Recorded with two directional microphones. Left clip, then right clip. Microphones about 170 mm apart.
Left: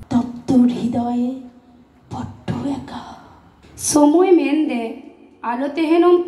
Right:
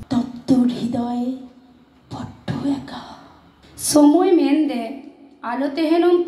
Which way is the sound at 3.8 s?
35° right (ahead or behind).